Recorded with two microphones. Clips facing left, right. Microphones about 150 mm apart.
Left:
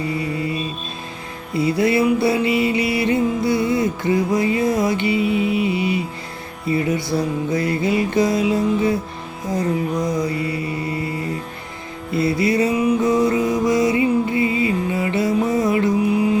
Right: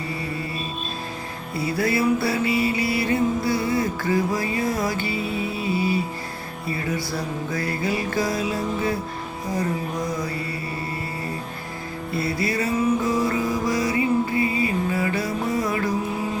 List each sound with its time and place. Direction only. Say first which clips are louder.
1.5 s music: left 6 dB; 20° left (ahead or behind)
10.2 s mantra: left 7 dB; 20° left (ahead or behind)
12.1 s music: left 7 dB; 20° left (ahead or behind)